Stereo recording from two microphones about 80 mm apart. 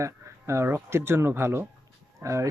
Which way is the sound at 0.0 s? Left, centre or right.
Right.